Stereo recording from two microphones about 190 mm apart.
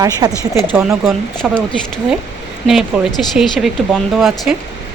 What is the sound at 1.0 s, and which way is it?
Speech, 5° right (ahead or behind).